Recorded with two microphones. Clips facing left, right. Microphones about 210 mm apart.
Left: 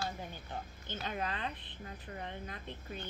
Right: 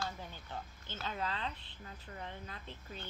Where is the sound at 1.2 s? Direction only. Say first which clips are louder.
Even; 55° left (ahead or behind).